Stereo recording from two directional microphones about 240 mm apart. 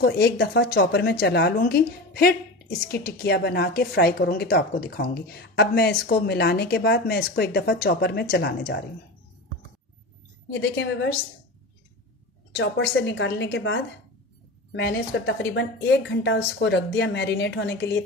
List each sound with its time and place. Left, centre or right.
0.0 s a woman's voice: left
10.5 s a woman's voice: left
12.5 s a woman's voice: left